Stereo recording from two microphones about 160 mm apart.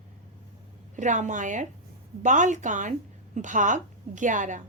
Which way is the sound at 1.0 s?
50° right (ahead or behind).